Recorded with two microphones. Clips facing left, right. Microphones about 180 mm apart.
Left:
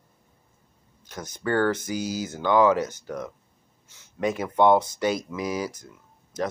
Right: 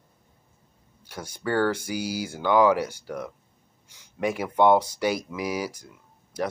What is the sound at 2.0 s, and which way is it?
Speech, 10° right (ahead or behind).